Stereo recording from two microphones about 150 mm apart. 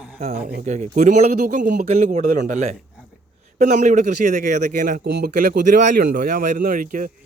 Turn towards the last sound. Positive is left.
turn(degrees=-65)  # may be behind; listen again after turning